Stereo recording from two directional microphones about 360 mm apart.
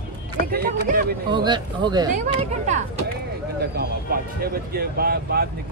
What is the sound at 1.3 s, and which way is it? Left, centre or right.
Speech, centre.